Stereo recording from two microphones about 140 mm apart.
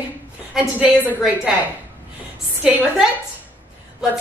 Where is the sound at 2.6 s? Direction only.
5° right (ahead or behind).